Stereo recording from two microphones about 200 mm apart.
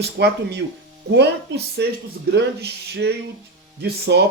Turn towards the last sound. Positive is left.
turn(degrees=-55)  # may be behind; listen again after turning